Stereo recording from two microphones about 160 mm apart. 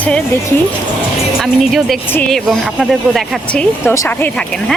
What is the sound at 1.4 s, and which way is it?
Speech, centre (ahead or behind).